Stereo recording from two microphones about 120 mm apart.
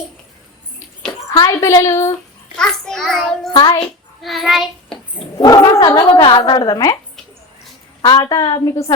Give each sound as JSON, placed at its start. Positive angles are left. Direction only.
{"t": 1.5, "sound": "a woman's voice", "side_deg": 30}
{"t": 2.6, "sound": "a child's voice", "side_deg": 5}
{"t": 3.5, "sound": "speech", "side_deg": 35}
{"t": 4.2, "sound": "child singing", "side_deg": 0}
{"t": 5.4, "sound": "speech", "side_deg": 35}
{"t": 8.0, "sound": "speech", "side_deg": 35}